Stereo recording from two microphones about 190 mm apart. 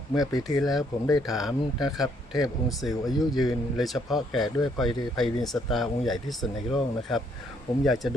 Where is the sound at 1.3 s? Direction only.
Centre (ahead or behind).